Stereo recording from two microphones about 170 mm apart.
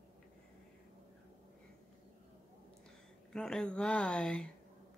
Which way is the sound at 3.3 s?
5° left (ahead or behind).